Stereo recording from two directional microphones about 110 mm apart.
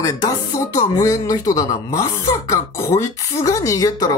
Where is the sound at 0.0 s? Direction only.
35° left (ahead or behind).